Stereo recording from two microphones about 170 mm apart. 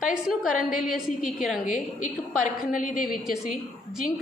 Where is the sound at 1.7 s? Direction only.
50° left (ahead or behind).